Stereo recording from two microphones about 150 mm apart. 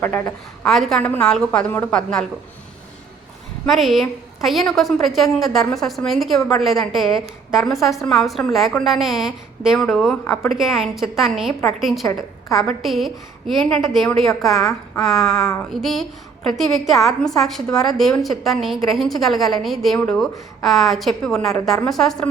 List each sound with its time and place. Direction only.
0.0 s a woman's voice: 15° left (ahead or behind)
3.7 s a woman's voice: centre (ahead or behind)
10.2 s a woman's voice: 20° left (ahead or behind)
10.6 s a woman's voice: centre (ahead or behind)
14.6 s a woman's voice: 20° left (ahead or behind)
15.0 s a woman's voice: centre (ahead or behind)